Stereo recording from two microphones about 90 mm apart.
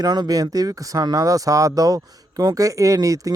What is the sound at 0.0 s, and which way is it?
Speech, 50° right (ahead or behind).